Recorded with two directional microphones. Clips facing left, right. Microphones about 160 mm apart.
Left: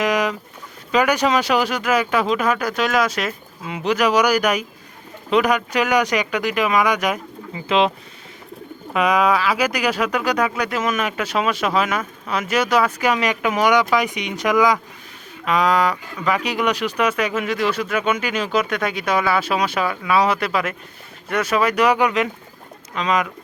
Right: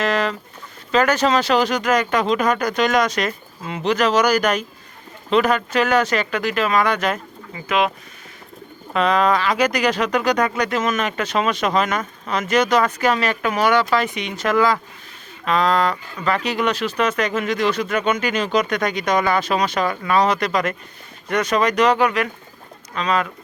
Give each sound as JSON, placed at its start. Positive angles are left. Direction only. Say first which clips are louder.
{"t": 0.0, "sound": "a sound", "louder": "left 1 dB", "side_deg": 15}
{"t": 0.9, "sound": "speech", "louder": "even", "side_deg": 10}
{"t": 7.7, "sound": "speech", "louder": "left 2 dB", "side_deg": 25}
{"t": 8.9, "sound": "speech", "louder": "even", "side_deg": 10}